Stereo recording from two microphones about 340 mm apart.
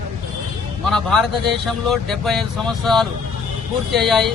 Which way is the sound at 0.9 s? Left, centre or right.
Centre.